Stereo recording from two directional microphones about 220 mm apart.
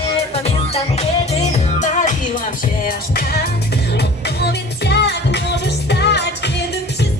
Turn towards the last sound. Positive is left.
turn(degrees=50)  # may be behind; listen again after turning